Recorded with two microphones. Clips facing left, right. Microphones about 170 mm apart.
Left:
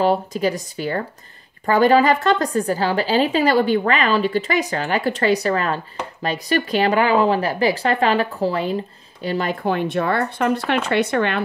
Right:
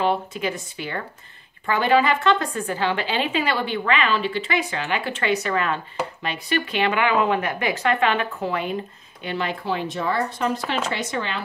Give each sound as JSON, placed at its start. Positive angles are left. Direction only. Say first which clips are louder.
{"t": 0.0, "sound": "a woman's voice", "louder": "left 5 dB", "side_deg": 40}